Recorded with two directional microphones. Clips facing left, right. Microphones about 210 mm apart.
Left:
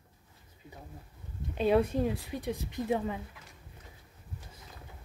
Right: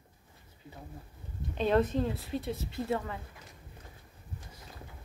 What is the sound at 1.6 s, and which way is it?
Speech, 10° left (ahead or behind).